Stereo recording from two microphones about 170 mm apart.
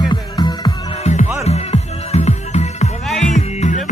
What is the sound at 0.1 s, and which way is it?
Music, 25° left (ahead or behind).